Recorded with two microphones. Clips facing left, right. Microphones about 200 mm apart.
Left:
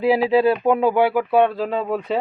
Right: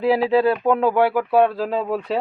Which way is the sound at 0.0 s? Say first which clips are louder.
Left 1 dB; 5° left (ahead or behind).